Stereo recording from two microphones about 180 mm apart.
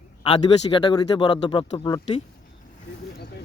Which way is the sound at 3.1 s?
65° left (ahead or behind).